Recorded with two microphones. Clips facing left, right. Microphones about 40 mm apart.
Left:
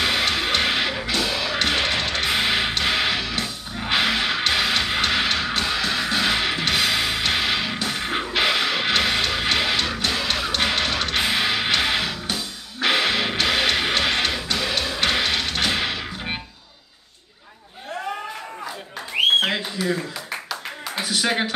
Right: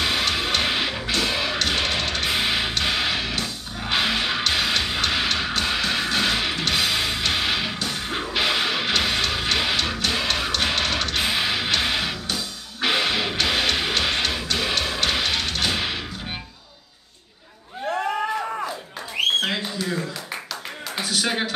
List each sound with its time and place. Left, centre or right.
0.0 s music: centre
1.2 s music: centre
1.6 s music: centre
5.7 s music: centre
6.2 s music: centre
7.7 s music: centre
14.6 s music: centre
15.0 s music: centre
19.4 s a sound: centre
21.1 s a sound: centre